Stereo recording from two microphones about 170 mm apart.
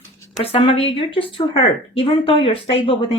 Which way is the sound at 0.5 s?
35° left (ahead or behind).